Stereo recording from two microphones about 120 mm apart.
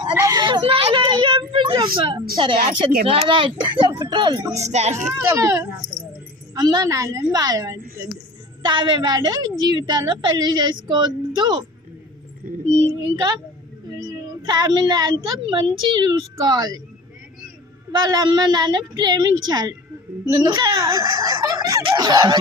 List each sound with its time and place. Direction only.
0.2 s a woman's voice: 35° right (ahead or behind)
4.6 s speech: 70° right (ahead or behind)
5.1 s a woman's voice: 25° right (ahead or behind)
8.6 s a woman's voice: 40° right (ahead or behind)
12.9 s a woman's voice: 30° right (ahead or behind)
17.9 s a woman's voice: 35° right (ahead or behind)